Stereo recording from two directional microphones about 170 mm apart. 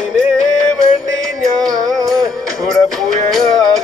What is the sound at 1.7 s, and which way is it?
Music, 20° right (ahead or behind).